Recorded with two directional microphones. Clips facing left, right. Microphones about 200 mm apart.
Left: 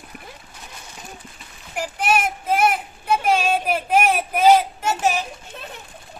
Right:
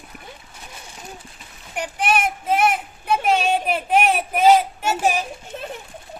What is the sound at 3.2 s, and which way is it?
Child singing, centre (ahead or behind).